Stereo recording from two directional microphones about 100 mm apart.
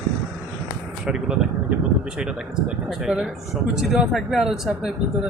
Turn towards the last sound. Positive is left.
turn(degrees=-5)  # may be behind; listen again after turning